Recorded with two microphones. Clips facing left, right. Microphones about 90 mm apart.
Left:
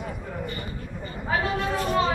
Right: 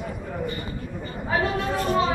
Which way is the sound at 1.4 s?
20° right (ahead or behind).